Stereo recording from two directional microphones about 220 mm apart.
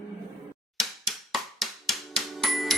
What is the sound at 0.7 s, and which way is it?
Music, centre (ahead or behind).